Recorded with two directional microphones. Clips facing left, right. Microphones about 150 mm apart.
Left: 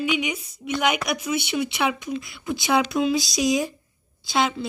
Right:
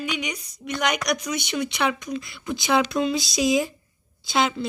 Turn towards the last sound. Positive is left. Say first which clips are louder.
# even
turn(degrees=0)  # may be behind; listen again after turning